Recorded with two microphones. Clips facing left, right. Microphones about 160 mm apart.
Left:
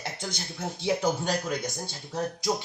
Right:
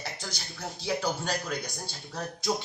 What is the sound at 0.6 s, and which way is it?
Speech, 25° left (ahead or behind).